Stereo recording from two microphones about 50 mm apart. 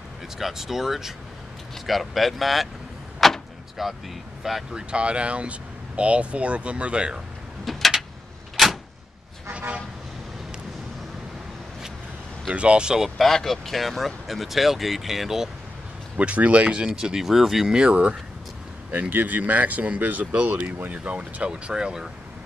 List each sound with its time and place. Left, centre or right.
0.4 s speech: centre
3.2 s vehicle: centre
4.4 s speech: centre
4.7 s speech: right
7.7 s a sound: centre
8.6 s door: centre
9.5 s toot: right
12.5 s speech: right
13.0 s speech: centre
16.2 s speech: right
16.8 s speech: centre
18.9 s speech: right
21.0 s speech: right